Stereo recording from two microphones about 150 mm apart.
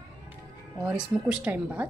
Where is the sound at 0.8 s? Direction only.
5° right (ahead or behind).